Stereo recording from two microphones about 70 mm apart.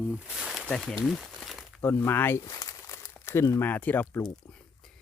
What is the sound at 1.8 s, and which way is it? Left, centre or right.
Speech, left.